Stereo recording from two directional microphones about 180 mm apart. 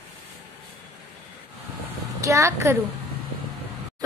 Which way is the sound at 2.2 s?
15° right (ahead or behind).